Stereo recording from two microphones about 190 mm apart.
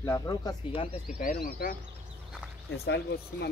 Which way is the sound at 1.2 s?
45° left (ahead or behind).